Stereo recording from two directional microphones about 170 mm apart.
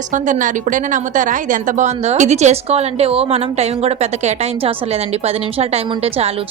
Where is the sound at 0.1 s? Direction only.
50° right (ahead or behind).